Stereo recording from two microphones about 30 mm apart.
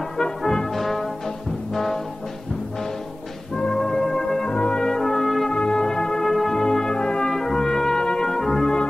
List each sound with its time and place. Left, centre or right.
0.4 s brass instrument: centre
0.7 s music: centre
1.7 s brass instrument: centre
3.5 s music: centre
4.5 s brass instrument: left
4.7 s brass instrument: centre
5.5 s music: left
6.3 s brass instrument: centre
6.6 s brass instrument: centre
7.2 s brass instrument: centre
8.3 s brass instrument: centre